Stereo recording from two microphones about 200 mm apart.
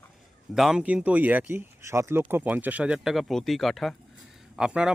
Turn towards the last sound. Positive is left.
turn(degrees=-5)  # may be behind; listen again after turning